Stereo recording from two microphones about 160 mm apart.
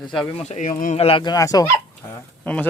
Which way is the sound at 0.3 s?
45° left (ahead or behind).